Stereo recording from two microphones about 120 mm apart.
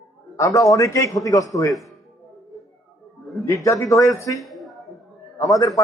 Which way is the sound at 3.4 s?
25° left (ahead or behind).